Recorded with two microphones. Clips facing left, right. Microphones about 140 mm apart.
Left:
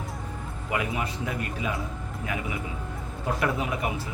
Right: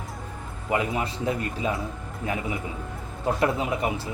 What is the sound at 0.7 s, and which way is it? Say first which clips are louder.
Speech: right 4 dB; 30° right (ahead or behind).